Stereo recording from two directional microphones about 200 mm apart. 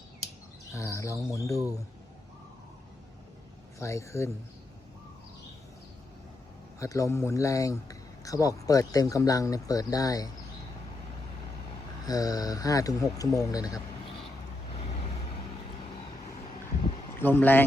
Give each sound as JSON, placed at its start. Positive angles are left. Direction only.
{"t": 0.7, "sound": "speech", "side_deg": 15}
{"t": 3.8, "sound": "speech", "side_deg": 15}
{"t": 6.7, "sound": "speech", "side_deg": 15}
{"t": 12.0, "sound": "speech", "side_deg": 20}
{"t": 17.2, "sound": "speech", "side_deg": 10}